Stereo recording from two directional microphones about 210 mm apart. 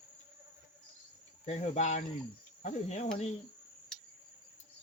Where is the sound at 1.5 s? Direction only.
35° left (ahead or behind).